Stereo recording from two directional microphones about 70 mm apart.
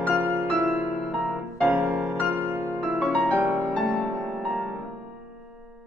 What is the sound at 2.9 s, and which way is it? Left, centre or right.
Music, centre.